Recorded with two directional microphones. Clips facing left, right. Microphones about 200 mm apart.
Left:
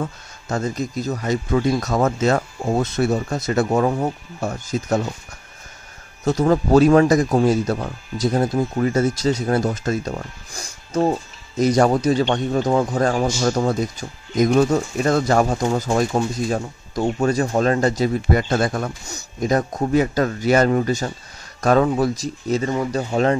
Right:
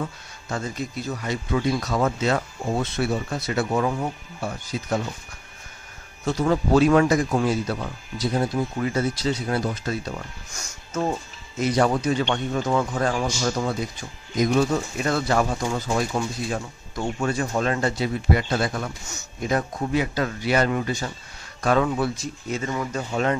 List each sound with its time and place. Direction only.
0.0 s speech: 45° left (ahead or behind)
6.2 s speech: 40° left (ahead or behind)
19.0 s speech: 40° left (ahead or behind)